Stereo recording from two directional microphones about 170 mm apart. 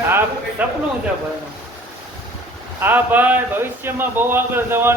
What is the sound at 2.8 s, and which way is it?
A man's voice, 10° right (ahead or behind).